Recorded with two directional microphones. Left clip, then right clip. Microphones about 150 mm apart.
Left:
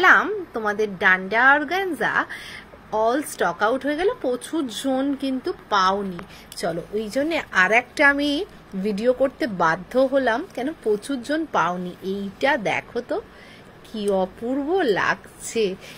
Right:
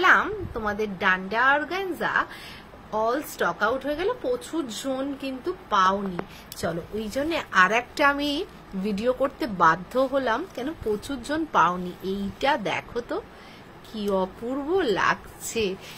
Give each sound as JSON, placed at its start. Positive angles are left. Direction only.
{"t": 0.0, "sound": "a woman's voice", "side_deg": 45}
{"t": 6.5, "sound": "a woman's voice", "side_deg": 30}